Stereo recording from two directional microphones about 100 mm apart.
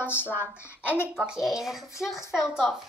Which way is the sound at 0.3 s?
15° right (ahead or behind).